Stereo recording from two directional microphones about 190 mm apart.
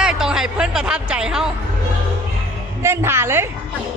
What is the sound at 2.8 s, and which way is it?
Speech, 15° right (ahead or behind).